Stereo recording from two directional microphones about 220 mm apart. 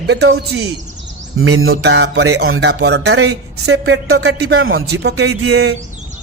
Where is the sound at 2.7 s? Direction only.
50° right (ahead or behind).